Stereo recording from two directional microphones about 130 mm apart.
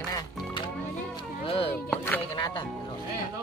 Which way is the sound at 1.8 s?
10° left (ahead or behind).